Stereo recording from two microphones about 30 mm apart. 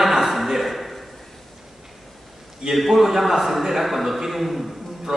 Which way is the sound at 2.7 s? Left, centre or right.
Centre.